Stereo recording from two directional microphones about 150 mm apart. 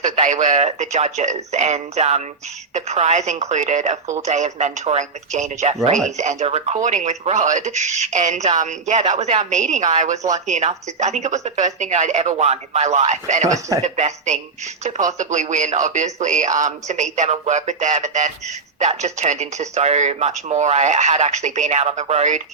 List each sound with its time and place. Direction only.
0.0 s speech: 50° right (ahead or behind)
13.5 s speech: 20° right (ahead or behind)
13.8 s speech: 50° right (ahead or behind)